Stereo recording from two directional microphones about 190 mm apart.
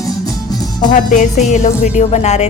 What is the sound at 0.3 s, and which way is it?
Music, 20° left (ahead or behind).